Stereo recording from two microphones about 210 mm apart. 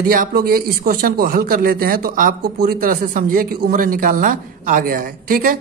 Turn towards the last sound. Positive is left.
turn(degrees=-40)  # may be behind; listen again after turning